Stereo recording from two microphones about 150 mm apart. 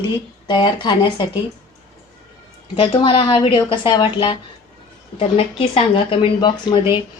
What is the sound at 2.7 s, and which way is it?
A woman's voice, 35° left (ahead or behind).